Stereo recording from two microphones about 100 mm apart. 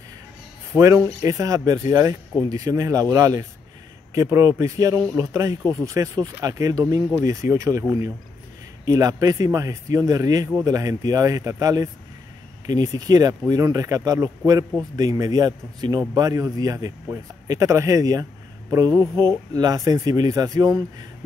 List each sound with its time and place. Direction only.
0.7 s speech: 30° right (ahead or behind)
8.8 s speech: 35° right (ahead or behind)